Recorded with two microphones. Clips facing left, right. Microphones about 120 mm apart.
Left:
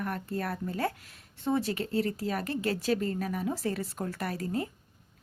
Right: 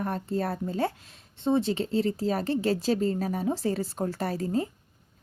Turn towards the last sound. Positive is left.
turn(degrees=-30)  # may be behind; listen again after turning